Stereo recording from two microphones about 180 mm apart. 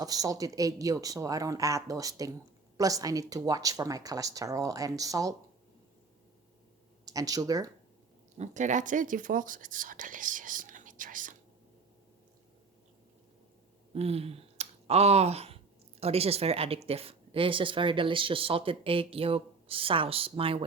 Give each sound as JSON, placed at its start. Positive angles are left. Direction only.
{"t": 0.0, "sound": "speech", "side_deg": -20}
{"t": 7.0, "sound": "speech", "side_deg": -20}
{"t": 8.4, "sound": "speech", "side_deg": -40}
{"t": 13.9, "sound": "speech", "side_deg": -35}